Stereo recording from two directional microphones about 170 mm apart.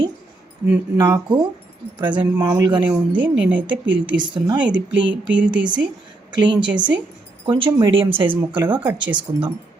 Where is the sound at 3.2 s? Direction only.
10° right (ahead or behind).